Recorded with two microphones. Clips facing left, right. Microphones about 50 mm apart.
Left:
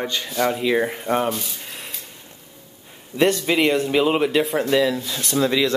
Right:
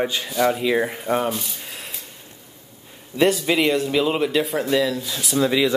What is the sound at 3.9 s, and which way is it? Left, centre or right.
Speech, centre.